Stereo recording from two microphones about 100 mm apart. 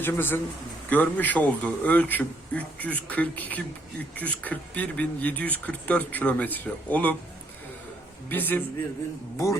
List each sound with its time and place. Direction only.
0.0 s a man's voice: 20° left (ahead or behind)
8.3 s a man's voice: 20° left (ahead or behind)